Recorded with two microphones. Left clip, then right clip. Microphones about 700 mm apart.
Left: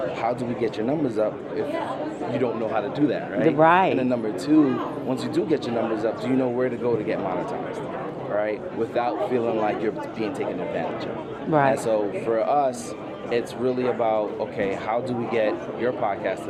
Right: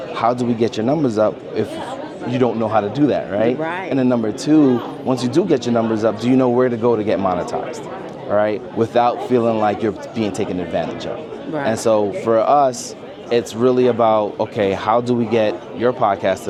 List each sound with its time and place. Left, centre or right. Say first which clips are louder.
0.2 s speech: right 12 dB; right
3.6 s speech: left 7 dB; left
3.9 s speech: right 6 dB; right
8.4 s speech: right 8 dB; right